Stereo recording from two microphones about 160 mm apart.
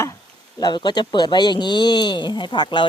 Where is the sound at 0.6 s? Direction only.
25° left (ahead or behind).